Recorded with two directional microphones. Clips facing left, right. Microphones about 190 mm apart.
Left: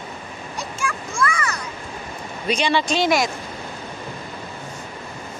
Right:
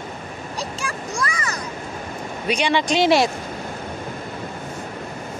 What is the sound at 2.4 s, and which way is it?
Speech, 15° right (ahead or behind).